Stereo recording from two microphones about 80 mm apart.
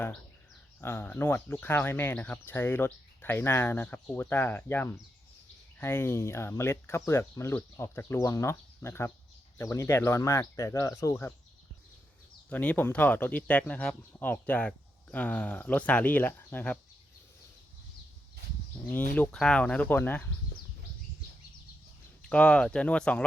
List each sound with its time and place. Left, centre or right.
0.8 s speech: left
12.5 s speech: centre
18.9 s speech: left
19.4 s speech: centre
19.9 s speech: left
22.2 s speech: centre